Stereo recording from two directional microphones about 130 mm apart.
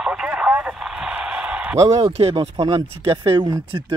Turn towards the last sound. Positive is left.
turn(degrees=-40)  # may be behind; listen again after turning